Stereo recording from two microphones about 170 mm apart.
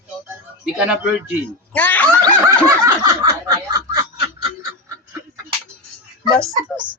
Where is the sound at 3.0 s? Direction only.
20° right (ahead or behind).